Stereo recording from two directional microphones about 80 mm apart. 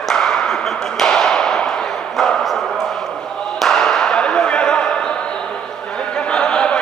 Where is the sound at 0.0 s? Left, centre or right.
Centre.